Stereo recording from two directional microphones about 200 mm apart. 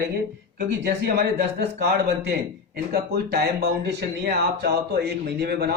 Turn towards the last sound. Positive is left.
turn(degrees=-55)  # may be behind; listen again after turning